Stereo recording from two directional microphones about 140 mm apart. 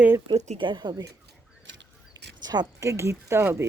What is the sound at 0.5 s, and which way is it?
Speech, 35° right (ahead or behind).